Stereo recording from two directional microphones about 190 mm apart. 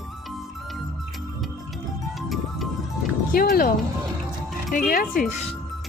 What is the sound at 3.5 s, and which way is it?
Speech, 50° left (ahead or behind).